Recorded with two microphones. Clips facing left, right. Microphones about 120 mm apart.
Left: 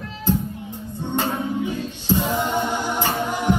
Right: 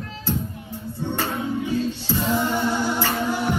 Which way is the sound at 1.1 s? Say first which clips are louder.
Left 3 dB; 20° left (ahead or behind).